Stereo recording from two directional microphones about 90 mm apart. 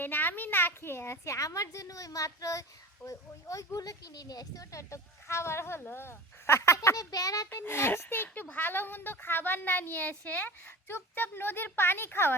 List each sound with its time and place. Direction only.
0.0 s a woman's voice: 20° left (ahead or behind); by 7.4 s 40° left (ahead or behind)
7.5 s speech: 25° left (ahead or behind)